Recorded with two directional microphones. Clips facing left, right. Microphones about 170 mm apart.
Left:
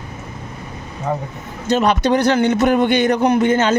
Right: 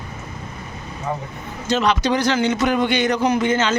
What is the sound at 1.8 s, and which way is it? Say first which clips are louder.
A man's voice: left 4 dB; 55° left (ahead or behind).